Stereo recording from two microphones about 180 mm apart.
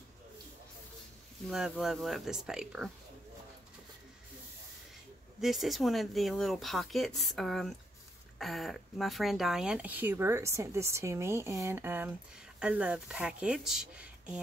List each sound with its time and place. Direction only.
1.5 s speech: centre (ahead or behind)
5.4 s speech: centre (ahead or behind)